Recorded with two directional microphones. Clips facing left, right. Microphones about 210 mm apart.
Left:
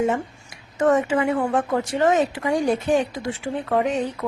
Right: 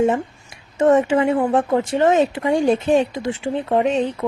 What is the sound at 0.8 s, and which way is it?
Speech, 25° right (ahead or behind).